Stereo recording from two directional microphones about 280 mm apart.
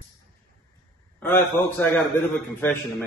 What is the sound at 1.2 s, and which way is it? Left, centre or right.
Speech, centre.